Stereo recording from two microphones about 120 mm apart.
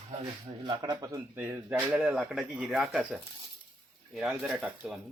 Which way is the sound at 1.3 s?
15° right (ahead or behind).